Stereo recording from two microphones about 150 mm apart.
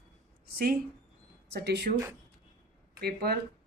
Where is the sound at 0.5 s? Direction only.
90° right.